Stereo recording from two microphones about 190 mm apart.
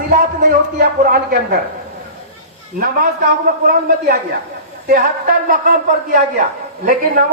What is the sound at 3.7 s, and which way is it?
A man's voice, 50° right (ahead or behind).